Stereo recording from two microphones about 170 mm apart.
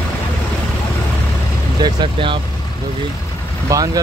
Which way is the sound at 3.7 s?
20° right (ahead or behind).